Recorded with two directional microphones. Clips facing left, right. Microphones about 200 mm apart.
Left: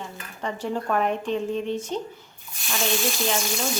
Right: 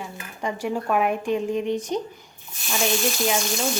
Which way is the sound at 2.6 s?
Centre (ahead or behind).